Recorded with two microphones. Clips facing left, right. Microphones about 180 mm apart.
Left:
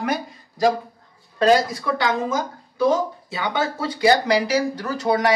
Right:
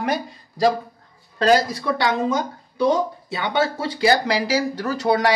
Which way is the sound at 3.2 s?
25° right (ahead or behind).